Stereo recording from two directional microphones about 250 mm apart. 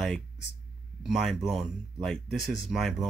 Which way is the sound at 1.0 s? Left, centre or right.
Centre.